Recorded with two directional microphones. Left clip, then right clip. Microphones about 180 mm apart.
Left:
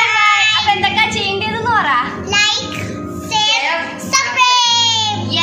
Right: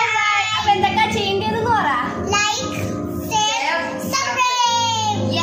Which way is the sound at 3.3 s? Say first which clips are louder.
Left 5 dB; 20° left (ahead or behind).